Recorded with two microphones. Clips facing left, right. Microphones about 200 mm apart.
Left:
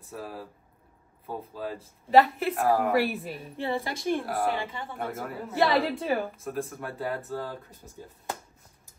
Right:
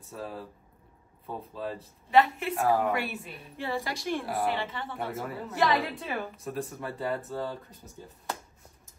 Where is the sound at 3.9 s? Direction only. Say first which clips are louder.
Left 4 dB; 50° left (ahead or behind).